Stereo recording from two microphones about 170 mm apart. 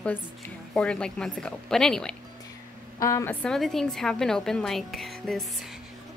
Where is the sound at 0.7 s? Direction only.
5° left (ahead or behind).